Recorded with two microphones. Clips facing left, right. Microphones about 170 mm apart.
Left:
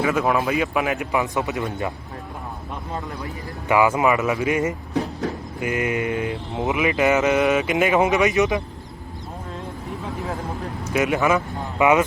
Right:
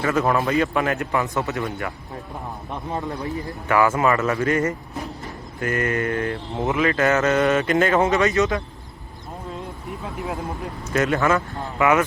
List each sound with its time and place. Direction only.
0.0 s speech: 5° left (ahead or behind)
3.7 s speech: 15° left (ahead or behind)
10.9 s speech: 10° left (ahead or behind)